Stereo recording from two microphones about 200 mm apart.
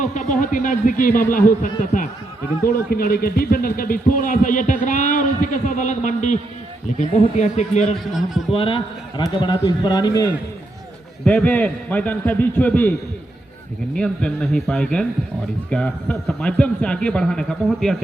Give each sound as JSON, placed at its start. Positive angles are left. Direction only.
{"t": 0.0, "sound": "a man's voice", "side_deg": 40}
{"t": 7.9, "sound": "a man's voice", "side_deg": 0}
{"t": 8.5, "sound": "a man's voice", "side_deg": 25}
{"t": 11.3, "sound": "a man's voice", "side_deg": 10}
{"t": 13.9, "sound": "a man's voice", "side_deg": 5}